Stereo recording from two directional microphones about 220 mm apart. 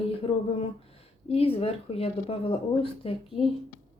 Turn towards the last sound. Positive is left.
turn(degrees=25)  # may be behind; listen again after turning